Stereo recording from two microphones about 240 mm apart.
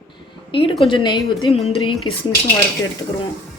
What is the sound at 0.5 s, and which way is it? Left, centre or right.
Speech, left.